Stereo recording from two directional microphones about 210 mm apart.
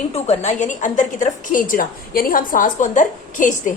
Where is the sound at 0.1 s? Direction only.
35° left (ahead or behind).